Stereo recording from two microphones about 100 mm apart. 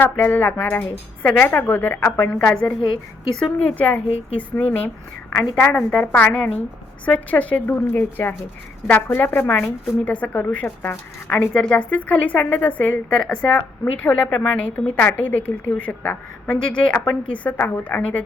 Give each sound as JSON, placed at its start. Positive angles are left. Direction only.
{"t": 0.0, "sound": "a woman's voice", "side_deg": 20}